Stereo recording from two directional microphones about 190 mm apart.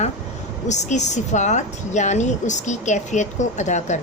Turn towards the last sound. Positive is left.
turn(degrees=40)  # may be behind; listen again after turning